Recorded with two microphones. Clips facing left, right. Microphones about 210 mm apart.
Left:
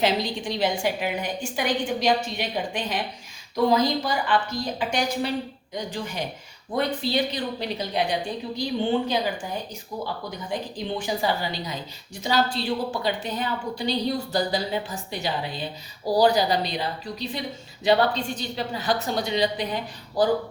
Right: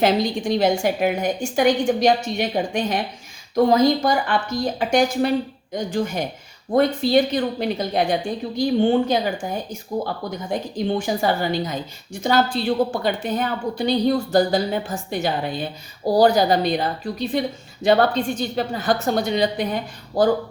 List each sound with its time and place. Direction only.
0.0 s a woman's voice: 50° right (ahead or behind)